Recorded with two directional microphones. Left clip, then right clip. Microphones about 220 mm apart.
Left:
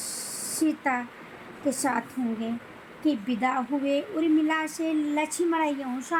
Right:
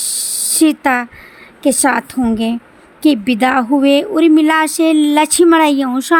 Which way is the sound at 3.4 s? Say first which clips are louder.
Right 15 dB; 45° right (ahead or behind).